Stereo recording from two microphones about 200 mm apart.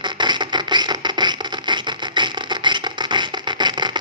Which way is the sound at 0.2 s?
20° right (ahead or behind).